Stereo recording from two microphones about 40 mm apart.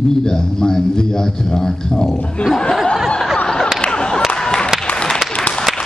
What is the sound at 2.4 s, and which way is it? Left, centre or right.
Speech, left.